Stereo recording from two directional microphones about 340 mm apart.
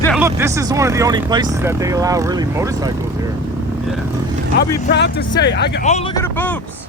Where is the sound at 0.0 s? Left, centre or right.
Centre.